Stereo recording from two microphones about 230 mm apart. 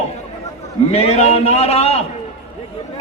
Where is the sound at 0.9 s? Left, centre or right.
Left.